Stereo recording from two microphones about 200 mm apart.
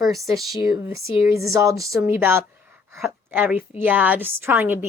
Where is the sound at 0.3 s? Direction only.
Centre (ahead or behind).